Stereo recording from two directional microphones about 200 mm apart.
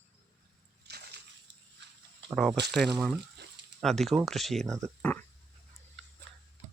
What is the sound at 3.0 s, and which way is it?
Speech, 5° right (ahead or behind).